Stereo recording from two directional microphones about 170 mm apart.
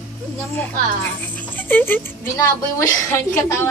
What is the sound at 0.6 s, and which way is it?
Speech, 10° left (ahead or behind).